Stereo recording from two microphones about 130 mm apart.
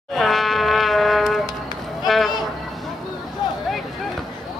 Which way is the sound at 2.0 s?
Centre (ahead or behind).